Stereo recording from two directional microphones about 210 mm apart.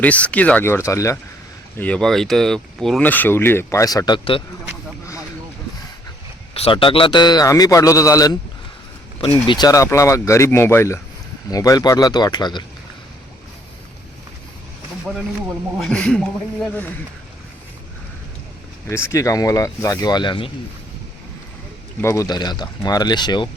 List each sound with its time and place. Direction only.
0.0 s speech: 5° left (ahead or behind)
1.8 s speech: 5° left (ahead or behind); by 4.4 s 20° left (ahead or behind)
6.5 s a man's voice: 25° left (ahead or behind)
9.5 s a man's voice: 20° left (ahead or behind)
15.0 s a man's voice: 5° right (ahead or behind)
18.9 s speech: 10° left (ahead or behind)
22.0 s a man's voice: 15° left (ahead or behind)